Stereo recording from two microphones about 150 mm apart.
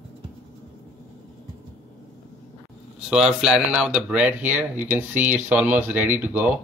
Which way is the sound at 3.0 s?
5° right (ahead or behind).